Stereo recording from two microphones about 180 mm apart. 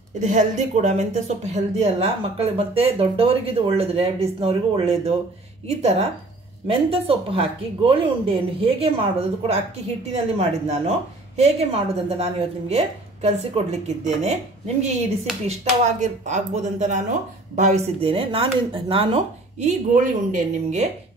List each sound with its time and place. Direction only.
0.2 s speech: 40° right (ahead or behind)
16.0 s speech: 40° right (ahead or behind)